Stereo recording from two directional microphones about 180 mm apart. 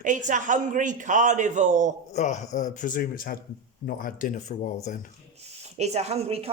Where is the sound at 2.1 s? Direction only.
40° left (ahead or behind).